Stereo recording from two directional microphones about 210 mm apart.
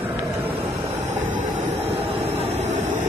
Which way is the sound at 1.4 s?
35° right (ahead or behind).